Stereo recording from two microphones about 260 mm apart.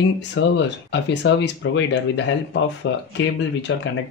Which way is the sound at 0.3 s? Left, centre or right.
Left.